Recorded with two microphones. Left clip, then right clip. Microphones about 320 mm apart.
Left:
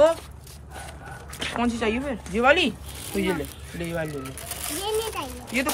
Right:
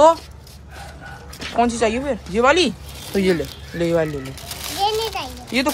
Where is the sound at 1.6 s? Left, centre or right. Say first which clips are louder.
Right 8 dB; centre.